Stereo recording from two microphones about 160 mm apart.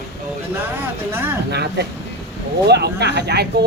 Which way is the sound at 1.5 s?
90° right.